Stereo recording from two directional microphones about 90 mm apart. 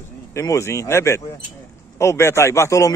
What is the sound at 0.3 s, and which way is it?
A man's voice, 35° left (ahead or behind).